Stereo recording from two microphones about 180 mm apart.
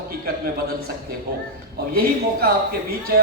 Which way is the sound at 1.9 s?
55° right (ahead or behind).